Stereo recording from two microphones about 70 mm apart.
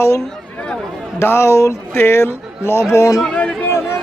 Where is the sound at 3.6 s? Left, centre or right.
Left.